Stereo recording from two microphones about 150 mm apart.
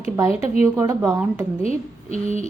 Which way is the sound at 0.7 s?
20° right (ahead or behind).